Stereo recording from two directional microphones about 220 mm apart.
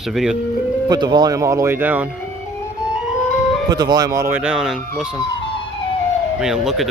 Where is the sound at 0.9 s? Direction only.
20° right (ahead or behind).